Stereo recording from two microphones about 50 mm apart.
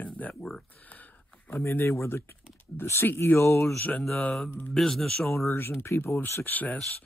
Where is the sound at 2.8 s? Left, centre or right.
Left.